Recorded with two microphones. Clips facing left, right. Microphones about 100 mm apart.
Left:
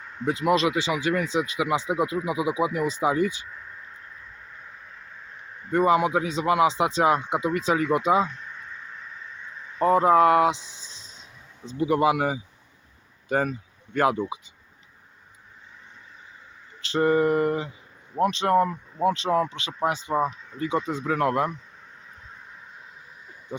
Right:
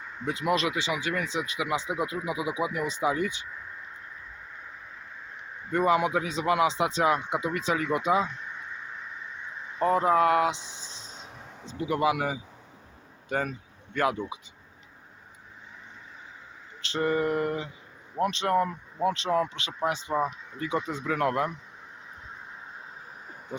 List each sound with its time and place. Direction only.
0.0 s a sound: centre (ahead or behind)
0.4 s speech: 30° left (ahead or behind)
1.4 s speech: 25° left (ahead or behind)
5.7 s speech: 25° left (ahead or behind)
8.3 s a sound: 10° right (ahead or behind)
9.8 s speech: 30° left (ahead or behind)
10.6 s speech: 20° right (ahead or behind)
11.1 s a sound: 55° right (ahead or behind)
11.6 s speech: 35° left (ahead or behind)
16.9 s speech: 35° left (ahead or behind)